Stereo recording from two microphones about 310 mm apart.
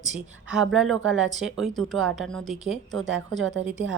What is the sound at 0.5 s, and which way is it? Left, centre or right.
Speech, centre.